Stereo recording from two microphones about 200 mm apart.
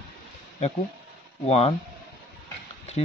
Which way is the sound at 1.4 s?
30° left (ahead or behind).